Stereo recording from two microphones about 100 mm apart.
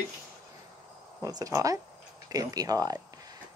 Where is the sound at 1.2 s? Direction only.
35° right (ahead or behind).